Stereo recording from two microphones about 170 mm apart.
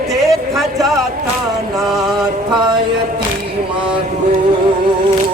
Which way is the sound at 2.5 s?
25° right (ahead or behind).